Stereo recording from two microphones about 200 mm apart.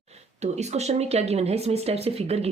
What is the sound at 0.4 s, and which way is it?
Speech, 35° right (ahead or behind).